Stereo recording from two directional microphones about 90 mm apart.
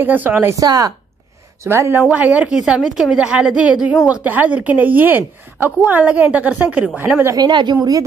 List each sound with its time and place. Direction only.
0.0 s a woman's voice: 20° right (ahead or behind)
0.5 s speech: 40° right (ahead or behind)
1.6 s a woman's voice: 30° right (ahead or behind)
2.0 s a woman's voice: 15° right (ahead or behind)
7.3 s speech: 55° right (ahead or behind)